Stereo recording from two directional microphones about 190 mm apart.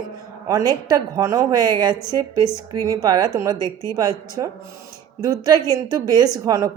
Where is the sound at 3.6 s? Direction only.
15° left (ahead or behind).